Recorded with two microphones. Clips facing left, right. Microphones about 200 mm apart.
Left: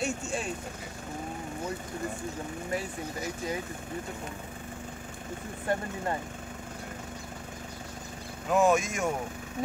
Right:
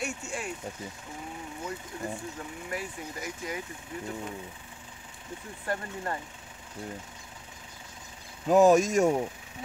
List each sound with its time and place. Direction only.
0.0 s vehicle: 25° left (ahead or behind)
2.7 s speech: 25° left (ahead or behind)
5.7 s speech: 20° left (ahead or behind)
8.5 s speech: 40° right (ahead or behind)